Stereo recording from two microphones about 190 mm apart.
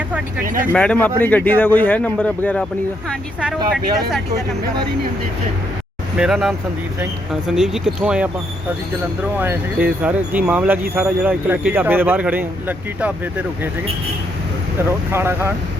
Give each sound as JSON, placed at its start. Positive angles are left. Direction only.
{"t": 0.4, "sound": "speech", "side_deg": -45}
{"t": 0.7, "sound": "a man's voice", "side_deg": 5}
{"t": 6.1, "sound": "speech", "side_deg": 0}
{"t": 9.4, "sound": "speech", "side_deg": -10}
{"t": 15.1, "sound": "speech", "side_deg": -10}